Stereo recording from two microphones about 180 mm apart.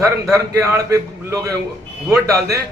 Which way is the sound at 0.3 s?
20° right (ahead or behind).